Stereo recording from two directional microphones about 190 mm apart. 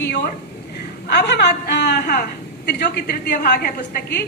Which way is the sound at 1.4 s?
60° left (ahead or behind).